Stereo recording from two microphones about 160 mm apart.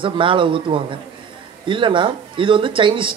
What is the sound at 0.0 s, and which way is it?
Speech, 30° right (ahead or behind).